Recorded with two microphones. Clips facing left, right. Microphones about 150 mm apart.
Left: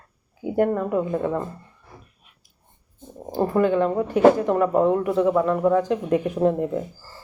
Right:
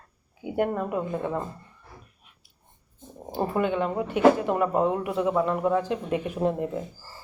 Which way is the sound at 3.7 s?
10° right (ahead or behind).